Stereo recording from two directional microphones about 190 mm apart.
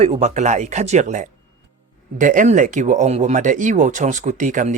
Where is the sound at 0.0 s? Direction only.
35° right (ahead or behind).